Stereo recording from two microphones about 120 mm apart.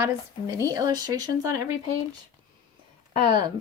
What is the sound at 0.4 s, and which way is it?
Speech, 30° right (ahead or behind).